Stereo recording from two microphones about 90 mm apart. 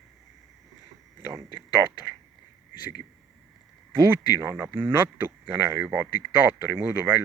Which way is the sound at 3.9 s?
30° right (ahead or behind).